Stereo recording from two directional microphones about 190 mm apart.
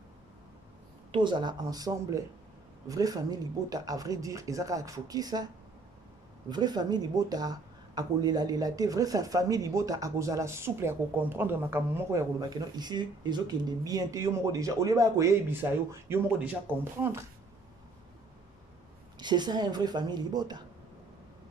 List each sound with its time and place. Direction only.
1.1 s speech: 25° right (ahead or behind)
6.5 s speech: 20° right (ahead or behind)
19.1 s speech: 25° right (ahead or behind)